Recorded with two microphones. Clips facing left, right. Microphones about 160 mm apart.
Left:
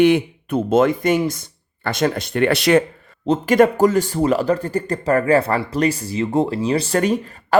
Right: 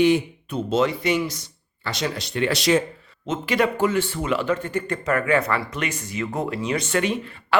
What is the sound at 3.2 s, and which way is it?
Speech, 40° left (ahead or behind).